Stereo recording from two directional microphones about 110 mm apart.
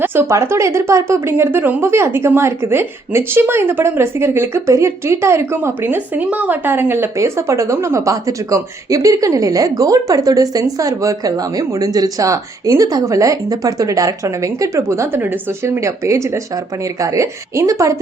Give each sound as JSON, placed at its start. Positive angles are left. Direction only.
{"t": 0.0, "sound": "a woman's voice", "side_deg": -25}